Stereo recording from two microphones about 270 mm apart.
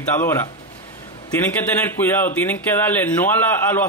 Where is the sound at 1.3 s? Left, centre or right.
Centre.